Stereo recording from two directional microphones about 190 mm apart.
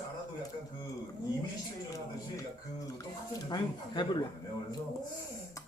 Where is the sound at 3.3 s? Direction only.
20° left (ahead or behind).